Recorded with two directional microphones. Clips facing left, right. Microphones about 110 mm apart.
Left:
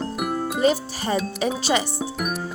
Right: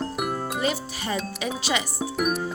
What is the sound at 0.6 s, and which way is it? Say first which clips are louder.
Speech: left 6 dB; 35° left (ahead or behind).